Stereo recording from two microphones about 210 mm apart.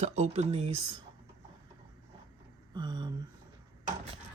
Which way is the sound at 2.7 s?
20° right (ahead or behind).